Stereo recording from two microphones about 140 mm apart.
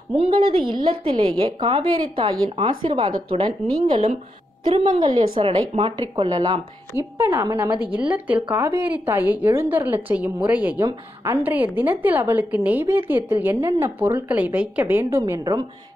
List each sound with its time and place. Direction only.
0.1 s a woman's voice: 40° right (ahead or behind)
4.9 s a woman's voice: 30° right (ahead or behind)
5.4 s a woman's voice: 40° right (ahead or behind)
6.9 s a woman's voice: 25° left (ahead or behind)
7.2 s a woman's voice: 20° right (ahead or behind)
7.9 s a woman's voice: 10° right (ahead or behind)
10.8 s a woman's voice: 25° right (ahead or behind)
11.4 s a woman's voice: 15° right (ahead or behind)